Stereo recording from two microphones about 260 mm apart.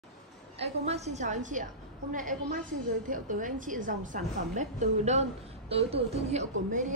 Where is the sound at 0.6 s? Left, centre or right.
Right.